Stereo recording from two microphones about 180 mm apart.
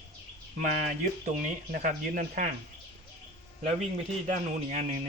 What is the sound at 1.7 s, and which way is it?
Speech, 50° right (ahead or behind).